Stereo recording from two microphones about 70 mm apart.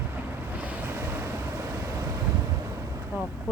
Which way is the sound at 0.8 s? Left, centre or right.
Right.